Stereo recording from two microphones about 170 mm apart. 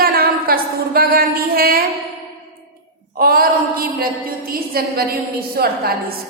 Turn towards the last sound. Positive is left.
turn(degrees=-65)  # may be behind; listen again after turning